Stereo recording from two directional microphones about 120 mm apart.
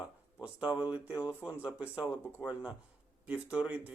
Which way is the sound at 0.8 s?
10° right (ahead or behind).